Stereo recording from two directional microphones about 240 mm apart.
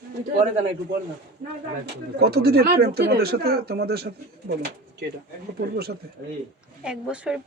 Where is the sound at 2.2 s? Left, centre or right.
Right.